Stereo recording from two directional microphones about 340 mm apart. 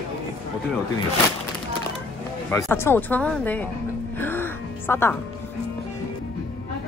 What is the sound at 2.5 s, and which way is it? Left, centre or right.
Speech, centre.